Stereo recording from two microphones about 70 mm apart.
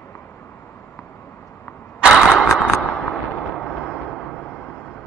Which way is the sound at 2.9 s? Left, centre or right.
Centre.